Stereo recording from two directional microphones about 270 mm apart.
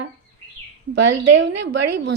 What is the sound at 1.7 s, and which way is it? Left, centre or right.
Speech, right.